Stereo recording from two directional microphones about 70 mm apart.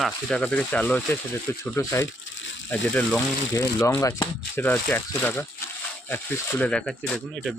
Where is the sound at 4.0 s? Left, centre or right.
Left.